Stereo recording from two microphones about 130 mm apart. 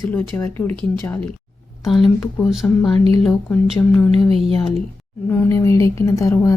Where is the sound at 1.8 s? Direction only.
Centre (ahead or behind).